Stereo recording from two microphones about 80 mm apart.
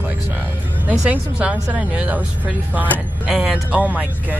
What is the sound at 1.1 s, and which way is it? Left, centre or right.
A woman's voice, centre.